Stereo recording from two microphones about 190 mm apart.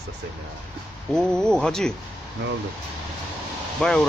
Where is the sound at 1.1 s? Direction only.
5° left (ahead or behind).